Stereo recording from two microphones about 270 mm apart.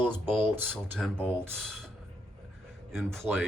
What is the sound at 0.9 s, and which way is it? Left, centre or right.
Speech, centre.